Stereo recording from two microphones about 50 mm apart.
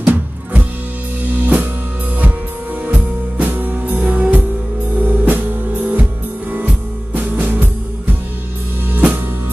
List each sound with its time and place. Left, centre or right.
0.0 s music: right
2.9 s music: right
7.2 s music: right